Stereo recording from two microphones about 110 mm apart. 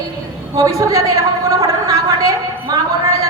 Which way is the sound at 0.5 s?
30° right (ahead or behind).